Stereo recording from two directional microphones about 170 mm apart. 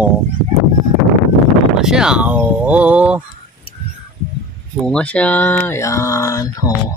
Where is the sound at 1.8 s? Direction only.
5° right (ahead or behind).